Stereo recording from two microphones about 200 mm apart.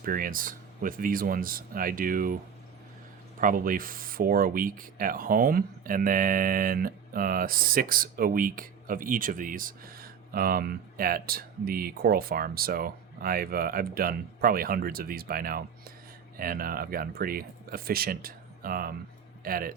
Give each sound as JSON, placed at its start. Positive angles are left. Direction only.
{"t": 0.0, "sound": "speech", "side_deg": -45}
{"t": 3.4, "sound": "speech", "side_deg": -45}